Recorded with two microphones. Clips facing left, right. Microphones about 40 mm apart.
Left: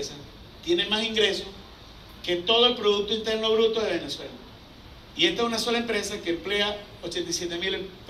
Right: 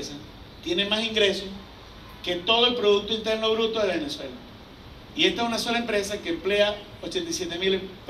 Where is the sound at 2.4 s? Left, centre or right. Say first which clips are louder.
Right 1 dB; right.